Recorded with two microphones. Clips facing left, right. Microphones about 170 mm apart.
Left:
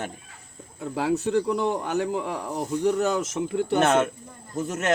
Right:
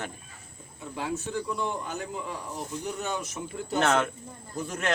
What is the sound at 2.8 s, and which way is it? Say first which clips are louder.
Speech: left 11 dB; 90° left.